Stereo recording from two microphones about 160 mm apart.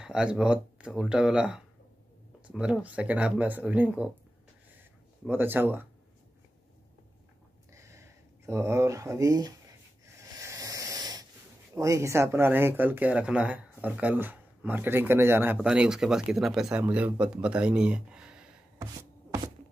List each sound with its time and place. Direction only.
0.0 s speech: 5° right (ahead or behind)
4.7 s a sound: 10° right (ahead or behind)
7.7 s a sound: 20° right (ahead or behind)
8.5 s speech: 20° right (ahead or behind)
10.4 s wheeze: 20° right (ahead or behind)
11.7 s speech: 20° right (ahead or behind)